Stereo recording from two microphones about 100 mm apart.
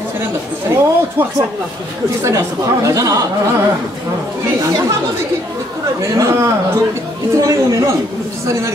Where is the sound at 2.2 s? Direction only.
30° right (ahead or behind).